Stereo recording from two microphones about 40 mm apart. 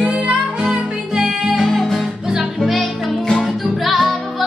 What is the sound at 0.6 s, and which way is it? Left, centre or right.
Music, centre.